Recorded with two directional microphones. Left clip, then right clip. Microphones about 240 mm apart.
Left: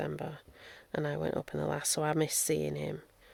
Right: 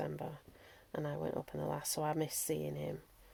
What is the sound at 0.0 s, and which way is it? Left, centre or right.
Speech, left.